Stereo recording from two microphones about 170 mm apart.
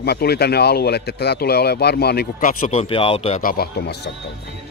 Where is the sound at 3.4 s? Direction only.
60° left (ahead or behind).